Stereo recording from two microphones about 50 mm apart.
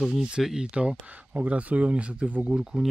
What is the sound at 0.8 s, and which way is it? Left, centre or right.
Speech, centre.